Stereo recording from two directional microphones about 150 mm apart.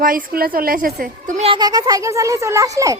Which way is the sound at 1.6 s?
25° right (ahead or behind).